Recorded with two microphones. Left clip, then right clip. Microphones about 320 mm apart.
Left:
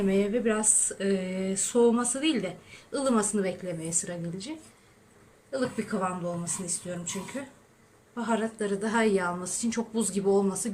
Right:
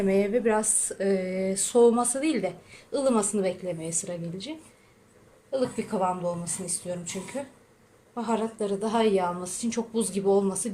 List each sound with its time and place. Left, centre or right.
0.1 s a woman's voice: centre
5.5 s a woman's voice: centre